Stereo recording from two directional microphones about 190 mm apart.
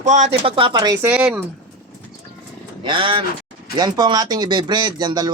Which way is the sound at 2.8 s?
25° right (ahead or behind).